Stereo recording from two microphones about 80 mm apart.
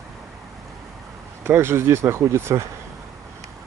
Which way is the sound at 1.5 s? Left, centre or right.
Right.